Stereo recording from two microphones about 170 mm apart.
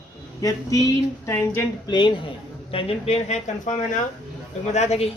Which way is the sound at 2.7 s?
40° left (ahead or behind).